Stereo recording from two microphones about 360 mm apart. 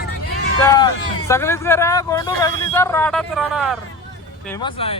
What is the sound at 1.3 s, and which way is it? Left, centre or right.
Speech, centre.